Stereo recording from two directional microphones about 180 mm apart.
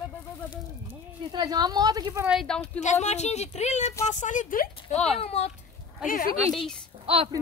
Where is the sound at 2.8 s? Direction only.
40° left (ahead or behind).